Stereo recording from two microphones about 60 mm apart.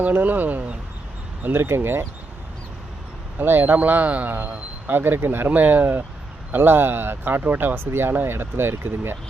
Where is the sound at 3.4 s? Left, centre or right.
Right.